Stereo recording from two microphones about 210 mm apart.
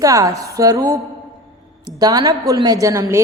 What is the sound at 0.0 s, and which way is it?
A woman's voice, 15° right (ahead or behind).